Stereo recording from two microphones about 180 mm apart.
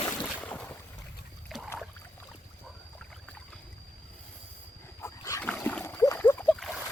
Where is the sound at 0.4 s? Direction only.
10° left (ahead or behind).